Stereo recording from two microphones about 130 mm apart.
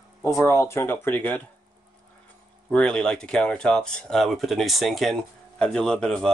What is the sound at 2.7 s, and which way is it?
A man's voice, 10° left (ahead or behind).